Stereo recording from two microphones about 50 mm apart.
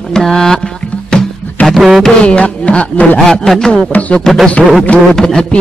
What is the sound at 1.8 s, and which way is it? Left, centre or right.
Music, centre.